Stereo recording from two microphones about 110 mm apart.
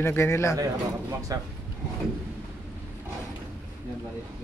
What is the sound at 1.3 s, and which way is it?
Speech, 30° right (ahead or behind).